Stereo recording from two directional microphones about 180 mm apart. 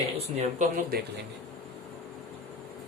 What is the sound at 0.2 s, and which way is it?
Speech, 40° right (ahead or behind).